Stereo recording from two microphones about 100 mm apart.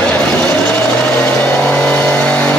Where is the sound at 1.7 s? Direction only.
15° left (ahead or behind).